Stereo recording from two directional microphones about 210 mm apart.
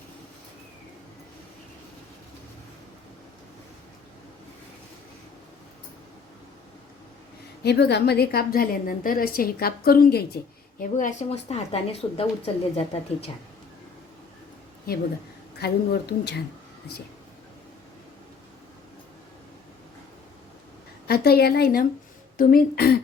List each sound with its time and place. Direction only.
7.6 s a woman's voice: 50° left (ahead or behind); by 13.3 s 30° left (ahead or behind)
15.5 s a woman's voice: 50° left (ahead or behind)
21.1 s a woman's voice: 50° left (ahead or behind)